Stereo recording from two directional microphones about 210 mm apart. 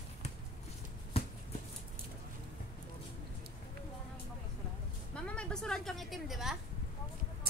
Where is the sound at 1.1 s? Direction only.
30° left (ahead or behind).